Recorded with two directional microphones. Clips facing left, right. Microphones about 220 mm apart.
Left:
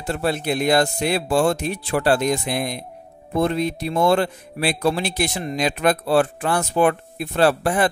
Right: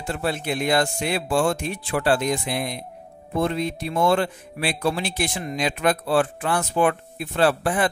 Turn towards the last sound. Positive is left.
turn(degrees=40)  # may be behind; listen again after turning